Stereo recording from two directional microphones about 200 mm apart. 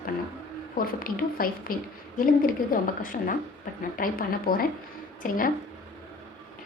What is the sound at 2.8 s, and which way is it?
A woman's voice, 45° left (ahead or behind).